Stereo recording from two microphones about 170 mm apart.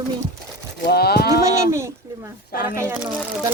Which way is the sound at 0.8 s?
65° left (ahead or behind).